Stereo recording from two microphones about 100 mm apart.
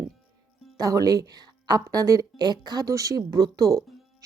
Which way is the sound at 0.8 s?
35° right (ahead or behind).